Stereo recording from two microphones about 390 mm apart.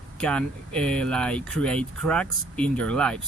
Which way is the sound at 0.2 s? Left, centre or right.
Centre.